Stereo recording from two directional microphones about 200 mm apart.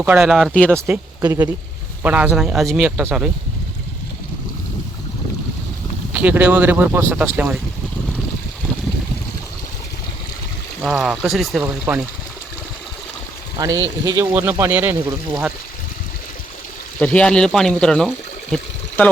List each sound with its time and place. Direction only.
0.0 s speech: 5° right (ahead or behind)
0.8 s speech: 15° right (ahead or behind)
6.1 s speech: 10° right (ahead or behind)
10.8 s speech: 5° right (ahead or behind)
13.6 s speech: 20° right (ahead or behind)
17.0 s speech: 5° left (ahead or behind)
18.5 s water: 5° left (ahead or behind)